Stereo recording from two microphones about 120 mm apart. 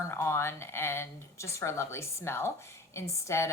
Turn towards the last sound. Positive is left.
turn(degrees=25)  # may be behind; listen again after turning